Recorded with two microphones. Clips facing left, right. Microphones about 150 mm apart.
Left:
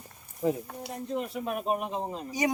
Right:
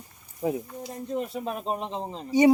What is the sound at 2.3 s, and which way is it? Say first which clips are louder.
Speech: right 10 dB; 25° right (ahead or behind).